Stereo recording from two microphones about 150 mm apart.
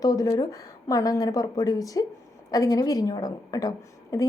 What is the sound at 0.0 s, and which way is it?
A woman's voice, 25° left (ahead or behind).